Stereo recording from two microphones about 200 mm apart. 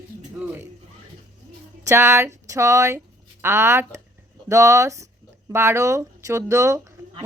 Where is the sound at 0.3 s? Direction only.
10° right (ahead or behind).